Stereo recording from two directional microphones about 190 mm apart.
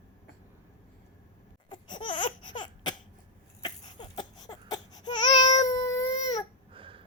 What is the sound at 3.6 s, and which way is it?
Baby cry, 25° left (ahead or behind).